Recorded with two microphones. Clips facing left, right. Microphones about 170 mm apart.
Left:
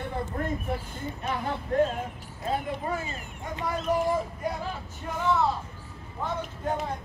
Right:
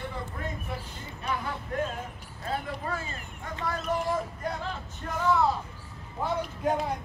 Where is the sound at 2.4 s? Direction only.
20° left (ahead or behind).